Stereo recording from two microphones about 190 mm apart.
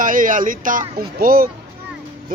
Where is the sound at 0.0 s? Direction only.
45° right (ahead or behind).